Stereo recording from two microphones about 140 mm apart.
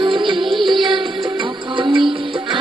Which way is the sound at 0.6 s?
35° right (ahead or behind).